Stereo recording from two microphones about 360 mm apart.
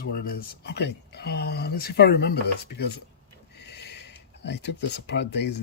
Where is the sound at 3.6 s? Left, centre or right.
Left.